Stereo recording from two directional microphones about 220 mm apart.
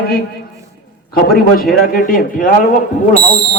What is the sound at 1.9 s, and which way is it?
Speech, 40° left (ahead or behind).